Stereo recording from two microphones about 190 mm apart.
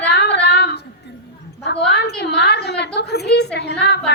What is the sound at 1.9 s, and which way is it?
A woman's voice, 60° left (ahead or behind).